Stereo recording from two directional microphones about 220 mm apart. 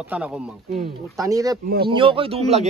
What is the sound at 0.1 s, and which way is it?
Speech, 5° right (ahead or behind).